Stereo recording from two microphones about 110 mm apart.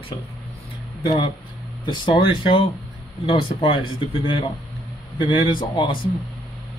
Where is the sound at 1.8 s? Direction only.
50° left (ahead or behind).